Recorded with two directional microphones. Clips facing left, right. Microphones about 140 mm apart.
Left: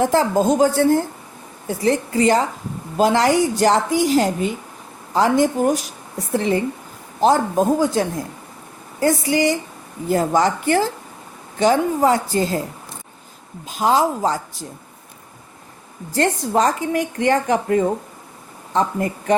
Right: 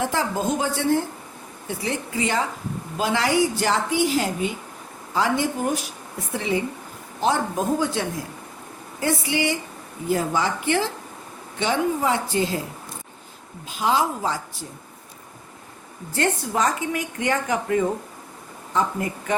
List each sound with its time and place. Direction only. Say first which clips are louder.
0.0 s speech: left 7 dB; 40° left (ahead or behind)
13.7 s speech: left 5 dB; 40° left (ahead or behind)
16.1 s speech: left 5 dB; 35° left (ahead or behind)